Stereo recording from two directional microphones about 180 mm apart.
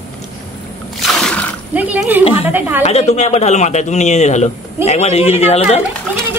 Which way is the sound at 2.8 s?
35° left (ahead or behind).